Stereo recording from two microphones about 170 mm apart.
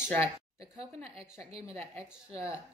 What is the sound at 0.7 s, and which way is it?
A woman's voice, 35° right (ahead or behind).